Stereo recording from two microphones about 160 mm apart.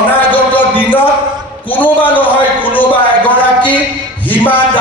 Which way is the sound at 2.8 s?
10° left (ahead or behind).